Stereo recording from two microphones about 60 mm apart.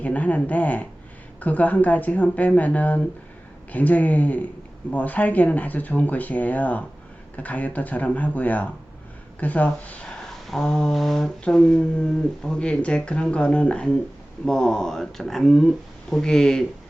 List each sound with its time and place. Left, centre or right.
0.0 s speech: left
10.2 s a sound: centre
11.4 s speech: centre